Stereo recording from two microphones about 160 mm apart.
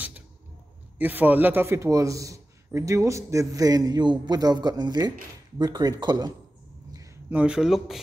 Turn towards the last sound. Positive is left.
turn(degrees=-5)  # may be behind; listen again after turning